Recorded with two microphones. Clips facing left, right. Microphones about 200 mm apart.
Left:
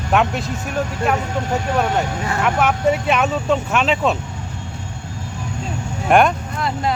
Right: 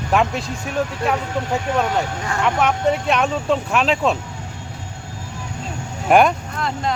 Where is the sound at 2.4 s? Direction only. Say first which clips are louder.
Even; 5° left (ahead or behind).